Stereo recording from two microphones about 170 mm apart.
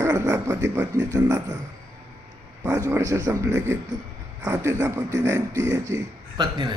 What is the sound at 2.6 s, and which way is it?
A man's voice, 20° right (ahead or behind).